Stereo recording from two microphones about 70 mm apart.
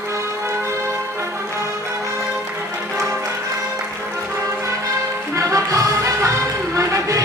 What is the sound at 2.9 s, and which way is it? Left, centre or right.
Music, right.